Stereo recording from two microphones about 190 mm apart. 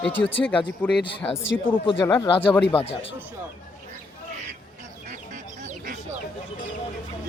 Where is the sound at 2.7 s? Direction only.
30° left (ahead or behind).